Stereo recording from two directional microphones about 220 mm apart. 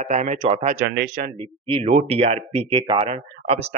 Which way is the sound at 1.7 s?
30° right (ahead or behind).